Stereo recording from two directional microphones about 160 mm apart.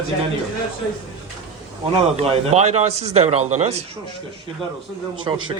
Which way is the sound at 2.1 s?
40° right (ahead or behind).